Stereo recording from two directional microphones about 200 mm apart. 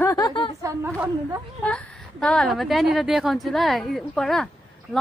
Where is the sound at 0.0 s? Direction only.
15° left (ahead or behind).